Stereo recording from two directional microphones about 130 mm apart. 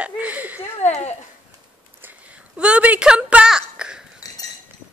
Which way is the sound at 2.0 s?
10° right (ahead or behind).